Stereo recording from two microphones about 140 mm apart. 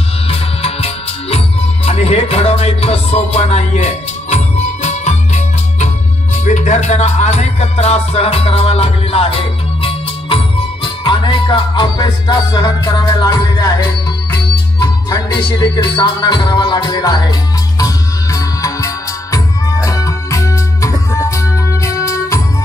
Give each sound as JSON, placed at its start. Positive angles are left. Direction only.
{"t": 0.3, "sound": "music", "side_deg": 45}